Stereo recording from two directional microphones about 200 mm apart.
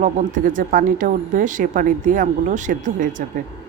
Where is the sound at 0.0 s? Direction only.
40° right (ahead or behind).